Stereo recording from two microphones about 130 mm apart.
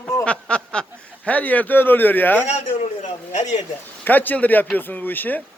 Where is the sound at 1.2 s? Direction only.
10° left (ahead or behind).